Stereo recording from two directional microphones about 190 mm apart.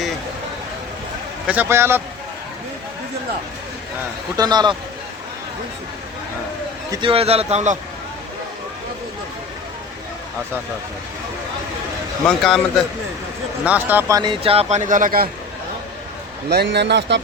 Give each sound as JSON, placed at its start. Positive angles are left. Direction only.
{"t": 1.5, "sound": "speech", "side_deg": -10}
{"t": 4.4, "sound": "a man's voice", "side_deg": -20}
{"t": 6.9, "sound": "speech", "side_deg": -25}
{"t": 12.2, "sound": "a man's voice", "side_deg": 0}
{"t": 13.7, "sound": "speech", "side_deg": -10}
{"t": 14.2, "sound": "speech", "side_deg": -25}
{"t": 16.5, "sound": "a man's voice", "side_deg": -60}